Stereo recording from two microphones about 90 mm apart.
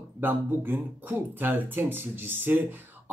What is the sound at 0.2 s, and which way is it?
Speech, 25° right (ahead or behind).